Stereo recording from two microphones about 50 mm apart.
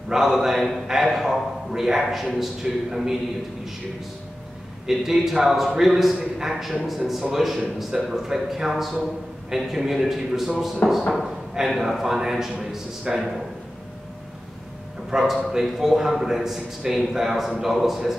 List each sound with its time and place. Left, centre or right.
0.1 s a man's voice: centre
4.8 s a man's voice: centre
10.8 s speech: left
11.1 s a man's voice: centre
15.0 s a man's voice: centre